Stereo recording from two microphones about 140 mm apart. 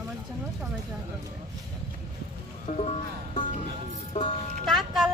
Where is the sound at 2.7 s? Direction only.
60° left (ahead or behind).